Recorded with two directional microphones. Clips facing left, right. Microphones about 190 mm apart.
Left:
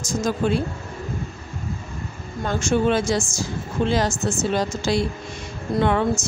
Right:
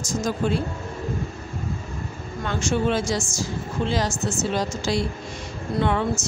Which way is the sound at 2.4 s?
50° left (ahead or behind).